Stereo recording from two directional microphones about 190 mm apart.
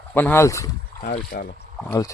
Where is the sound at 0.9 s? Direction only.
45° left (ahead or behind).